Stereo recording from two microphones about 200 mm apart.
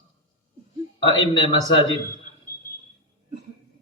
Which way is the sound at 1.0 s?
25° left (ahead or behind).